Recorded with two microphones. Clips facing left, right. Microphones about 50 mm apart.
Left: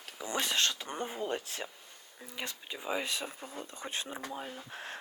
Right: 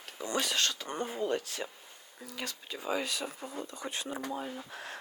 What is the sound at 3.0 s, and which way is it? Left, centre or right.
Speech, left.